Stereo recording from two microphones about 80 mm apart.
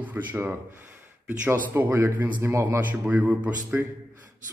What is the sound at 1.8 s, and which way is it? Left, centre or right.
A man's voice, right.